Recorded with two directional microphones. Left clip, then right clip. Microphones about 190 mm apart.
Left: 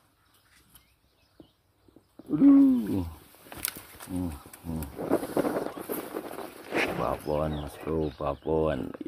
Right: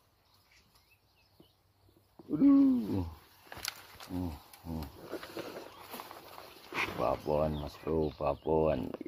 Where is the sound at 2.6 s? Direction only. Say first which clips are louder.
Left 6 dB; 55° left (ahead or behind).